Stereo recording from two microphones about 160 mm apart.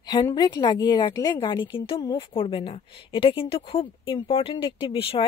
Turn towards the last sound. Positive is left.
turn(degrees=35)  # may be behind; listen again after turning